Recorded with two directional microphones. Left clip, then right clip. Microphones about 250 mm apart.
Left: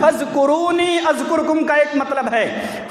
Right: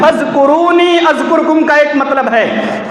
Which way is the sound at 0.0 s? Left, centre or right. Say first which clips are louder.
Right 6 dB; left.